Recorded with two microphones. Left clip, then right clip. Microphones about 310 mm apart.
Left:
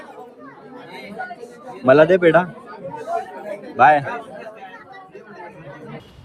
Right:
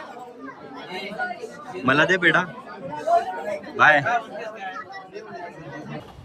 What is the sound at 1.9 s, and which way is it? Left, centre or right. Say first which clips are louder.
Speech: left 6 dB; centre.